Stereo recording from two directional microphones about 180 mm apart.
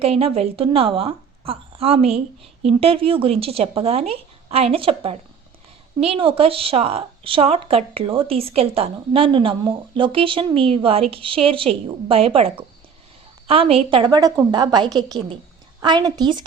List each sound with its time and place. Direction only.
0.0 s a woman's voice: 35° right (ahead or behind)
13.5 s a woman's voice: 30° right (ahead or behind)